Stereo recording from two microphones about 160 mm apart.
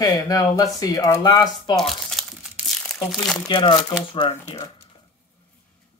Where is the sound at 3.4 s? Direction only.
30° left (ahead or behind).